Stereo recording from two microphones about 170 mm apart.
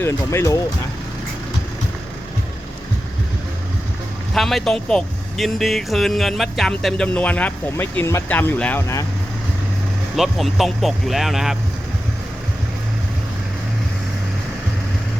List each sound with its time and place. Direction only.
0.0 s speech: 15° left (ahead or behind)
4.4 s speech: centre (ahead or behind)
10.2 s speech: centre (ahead or behind)